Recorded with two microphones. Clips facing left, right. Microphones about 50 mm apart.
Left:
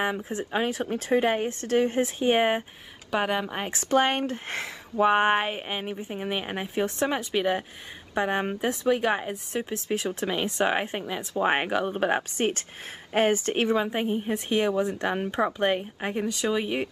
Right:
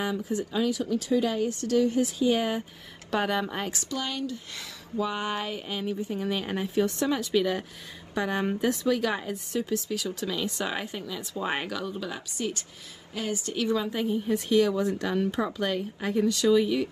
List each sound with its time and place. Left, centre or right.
0.0 s speech: left
3.1 s speech: centre
3.9 s speech: left